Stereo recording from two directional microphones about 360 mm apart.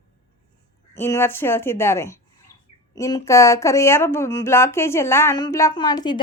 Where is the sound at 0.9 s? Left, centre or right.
Centre.